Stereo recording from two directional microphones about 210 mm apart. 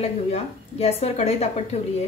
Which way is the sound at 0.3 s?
30° left (ahead or behind).